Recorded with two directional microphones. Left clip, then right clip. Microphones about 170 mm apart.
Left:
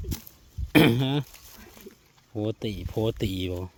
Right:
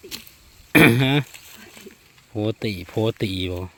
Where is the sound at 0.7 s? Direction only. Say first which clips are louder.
Right 6 dB; centre (ahead or behind).